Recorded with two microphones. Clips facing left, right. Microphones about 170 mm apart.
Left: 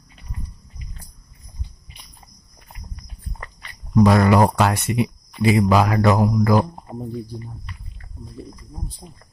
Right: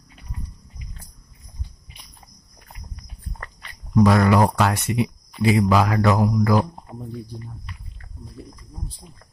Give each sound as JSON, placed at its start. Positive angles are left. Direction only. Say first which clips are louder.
{"t": 4.0, "sound": "speech", "louder": "left 2 dB", "side_deg": 25}
{"t": 6.5, "sound": "speech", "louder": "left 2 dB", "side_deg": 35}
{"t": 7.1, "sound": "speech", "louder": "left 4 dB", "side_deg": 0}